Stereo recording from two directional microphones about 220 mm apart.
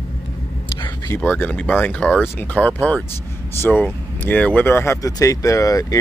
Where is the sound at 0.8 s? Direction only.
15° left (ahead or behind).